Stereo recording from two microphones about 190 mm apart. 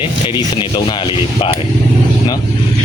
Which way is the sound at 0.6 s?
25° left (ahead or behind).